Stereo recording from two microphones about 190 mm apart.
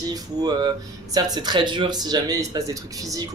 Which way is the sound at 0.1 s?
20° right (ahead or behind).